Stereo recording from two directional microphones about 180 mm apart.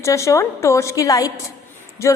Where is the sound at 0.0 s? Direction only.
15° left (ahead or behind).